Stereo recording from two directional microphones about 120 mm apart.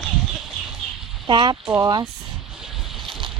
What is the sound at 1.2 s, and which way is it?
Speech, 40° right (ahead or behind).